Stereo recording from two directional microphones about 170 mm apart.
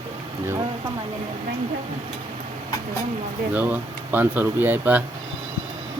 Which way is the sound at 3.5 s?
10° right (ahead or behind).